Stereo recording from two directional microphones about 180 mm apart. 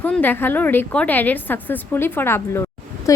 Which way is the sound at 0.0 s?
10° left (ahead or behind).